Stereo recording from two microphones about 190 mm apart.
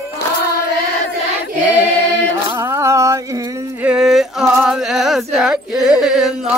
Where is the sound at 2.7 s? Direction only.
15° right (ahead or behind).